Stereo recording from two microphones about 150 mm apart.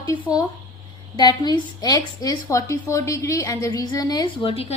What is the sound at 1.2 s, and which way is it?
A woman's voice, 30° left (ahead or behind).